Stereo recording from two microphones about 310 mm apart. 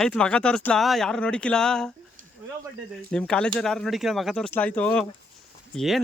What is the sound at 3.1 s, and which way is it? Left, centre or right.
Speech, centre.